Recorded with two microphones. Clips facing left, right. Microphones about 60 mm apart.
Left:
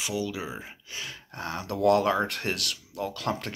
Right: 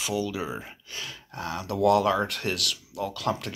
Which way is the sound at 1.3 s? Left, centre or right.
Left.